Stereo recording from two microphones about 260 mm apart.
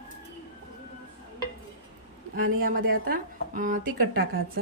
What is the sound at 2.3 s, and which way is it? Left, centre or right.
A woman's voice, right.